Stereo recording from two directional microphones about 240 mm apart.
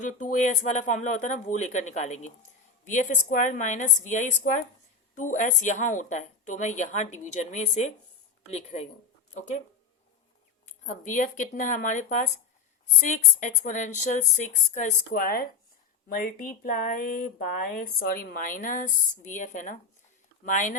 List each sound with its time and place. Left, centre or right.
0.0 s speech: left
10.8 s speech: left